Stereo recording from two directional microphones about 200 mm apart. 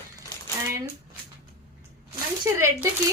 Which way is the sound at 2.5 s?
15° right (ahead or behind).